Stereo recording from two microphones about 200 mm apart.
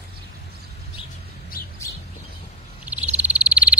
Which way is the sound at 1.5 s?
45° left (ahead or behind).